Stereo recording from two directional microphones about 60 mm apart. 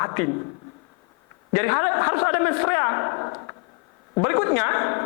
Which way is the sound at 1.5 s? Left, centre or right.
Left.